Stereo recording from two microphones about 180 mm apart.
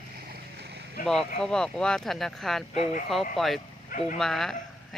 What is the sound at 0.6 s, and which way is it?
Boat, 65° right (ahead or behind).